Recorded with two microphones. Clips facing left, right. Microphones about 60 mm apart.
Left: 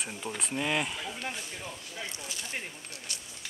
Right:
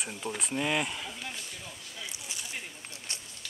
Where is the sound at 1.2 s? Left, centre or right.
Left.